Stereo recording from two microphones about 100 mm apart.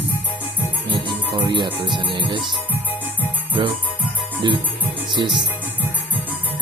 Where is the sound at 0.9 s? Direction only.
50° right (ahead or behind).